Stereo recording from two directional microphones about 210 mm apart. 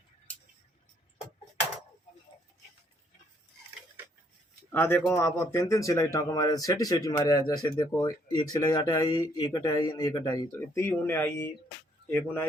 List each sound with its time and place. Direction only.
4.7 s speech: 10° left (ahead or behind)